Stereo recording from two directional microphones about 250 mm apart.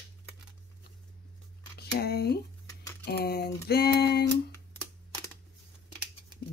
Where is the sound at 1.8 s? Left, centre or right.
Left.